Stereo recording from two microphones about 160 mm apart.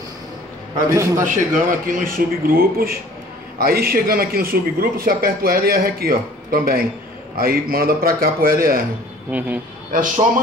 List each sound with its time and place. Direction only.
0.8 s a man's voice: 20° right (ahead or behind)
1.2 s a man's voice: 60° right (ahead or behind)
9.3 s speech: 10° right (ahead or behind)
9.9 s speech: 55° right (ahead or behind)